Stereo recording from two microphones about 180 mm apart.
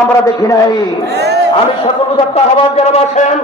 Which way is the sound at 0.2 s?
20° left (ahead or behind).